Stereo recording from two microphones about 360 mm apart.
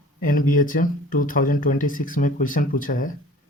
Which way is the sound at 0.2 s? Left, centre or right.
Left.